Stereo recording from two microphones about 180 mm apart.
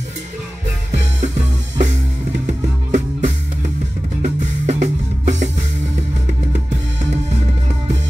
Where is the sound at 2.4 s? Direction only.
45° right (ahead or behind).